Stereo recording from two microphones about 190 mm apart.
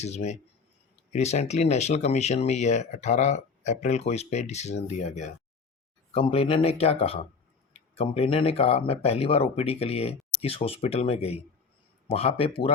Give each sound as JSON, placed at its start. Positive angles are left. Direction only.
{"t": 0.0, "sound": "speech", "side_deg": 35}